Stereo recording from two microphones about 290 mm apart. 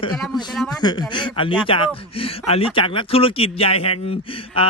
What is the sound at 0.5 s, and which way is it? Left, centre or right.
Speech, centre.